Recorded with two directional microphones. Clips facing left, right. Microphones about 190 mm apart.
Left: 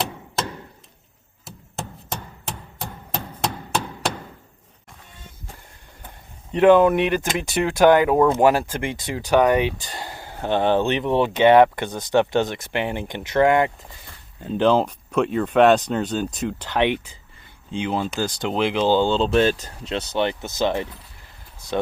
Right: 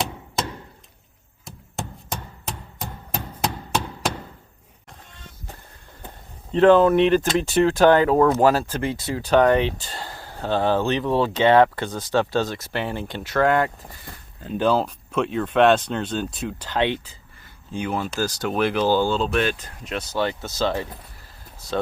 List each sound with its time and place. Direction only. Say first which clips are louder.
1.5 s a sound: right 1 dB; centre (ahead or behind)
6.5 s speech: even; 15° left (ahead or behind)
15.1 s speech: left 3 dB; 5° left (ahead or behind); by 20.0 s 30° left (ahead or behind)
20.1 s speech: left 1 dB; 20° left (ahead or behind)